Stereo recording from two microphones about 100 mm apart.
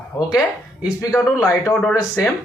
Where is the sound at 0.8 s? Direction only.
5° right (ahead or behind).